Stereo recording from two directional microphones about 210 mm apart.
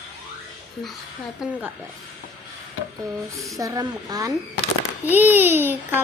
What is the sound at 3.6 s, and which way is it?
A child's voice, 15° right (ahead or behind).